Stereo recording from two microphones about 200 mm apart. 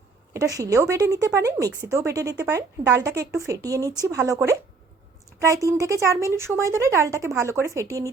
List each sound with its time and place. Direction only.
0.3 s speech: 15° right (ahead or behind)